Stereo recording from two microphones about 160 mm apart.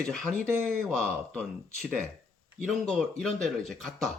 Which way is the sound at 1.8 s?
10° right (ahead or behind).